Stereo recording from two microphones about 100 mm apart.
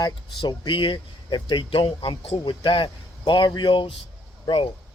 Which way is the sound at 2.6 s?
60° left (ahead or behind).